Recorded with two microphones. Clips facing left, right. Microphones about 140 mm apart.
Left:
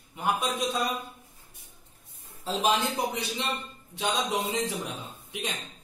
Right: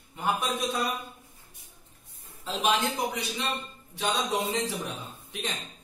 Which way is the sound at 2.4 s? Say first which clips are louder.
Left 1 dB; 35° left (ahead or behind).